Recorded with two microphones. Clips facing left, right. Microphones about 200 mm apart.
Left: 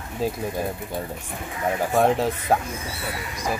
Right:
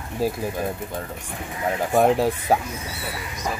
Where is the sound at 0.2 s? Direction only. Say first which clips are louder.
Right 2 dB; 10° right (ahead or behind).